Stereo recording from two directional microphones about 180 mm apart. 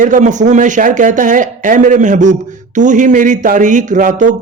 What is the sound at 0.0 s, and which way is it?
Speech, 45° right (ahead or behind).